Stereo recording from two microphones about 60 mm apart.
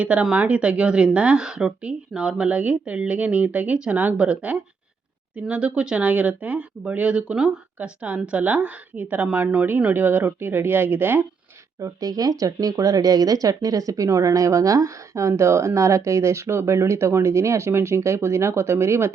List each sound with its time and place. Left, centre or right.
0.0 s speech: centre; by 11.3 s right
11.8 s speech: right